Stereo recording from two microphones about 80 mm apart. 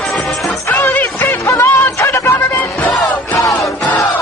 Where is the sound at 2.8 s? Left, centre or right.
Centre.